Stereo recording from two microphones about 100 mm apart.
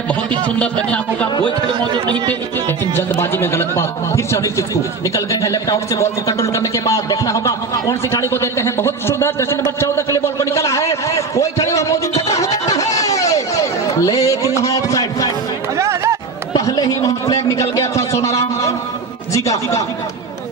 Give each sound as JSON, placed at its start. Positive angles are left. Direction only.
{"t": 0.1, "sound": "speech", "side_deg": 15}
{"t": 2.0, "sound": "speech", "side_deg": -50}
{"t": 2.9, "sound": "speech", "side_deg": 25}
{"t": 11.3, "sound": "music", "side_deg": 30}
{"t": 14.6, "sound": "speech", "side_deg": 35}
{"t": 15.8, "sound": "music", "side_deg": -30}
{"t": 16.6, "sound": "speech", "side_deg": 40}
{"t": 19.3, "sound": "speech", "side_deg": 35}